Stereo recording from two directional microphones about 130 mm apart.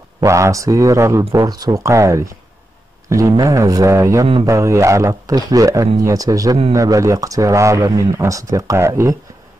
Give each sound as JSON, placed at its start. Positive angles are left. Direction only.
{"t": 0.2, "sound": "speech", "side_deg": -25}